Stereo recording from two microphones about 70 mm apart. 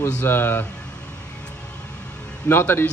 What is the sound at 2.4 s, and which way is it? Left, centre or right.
Speech, left.